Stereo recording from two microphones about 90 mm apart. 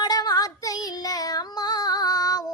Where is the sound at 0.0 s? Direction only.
45° left (ahead or behind).